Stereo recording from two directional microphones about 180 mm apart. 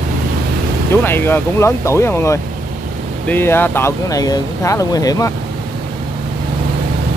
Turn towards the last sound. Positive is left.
turn(degrees=20)  # may be behind; listen again after turning